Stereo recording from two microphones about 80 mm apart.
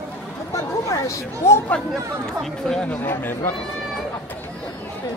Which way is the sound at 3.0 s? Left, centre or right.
Left.